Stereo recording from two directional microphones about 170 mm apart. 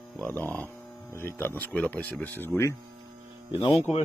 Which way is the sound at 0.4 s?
10° left (ahead or behind).